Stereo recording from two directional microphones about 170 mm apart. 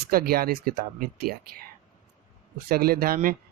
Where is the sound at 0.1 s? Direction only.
60° right (ahead or behind).